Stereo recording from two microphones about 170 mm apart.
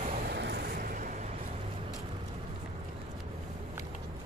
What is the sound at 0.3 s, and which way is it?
Vehicle, 75° right (ahead or behind).